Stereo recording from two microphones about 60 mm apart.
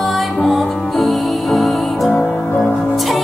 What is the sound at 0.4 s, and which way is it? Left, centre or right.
Music, centre.